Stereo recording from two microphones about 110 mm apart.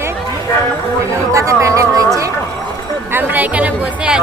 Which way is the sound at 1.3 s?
30° right (ahead or behind).